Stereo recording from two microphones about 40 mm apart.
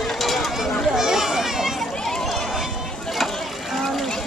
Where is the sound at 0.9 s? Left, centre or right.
Centre.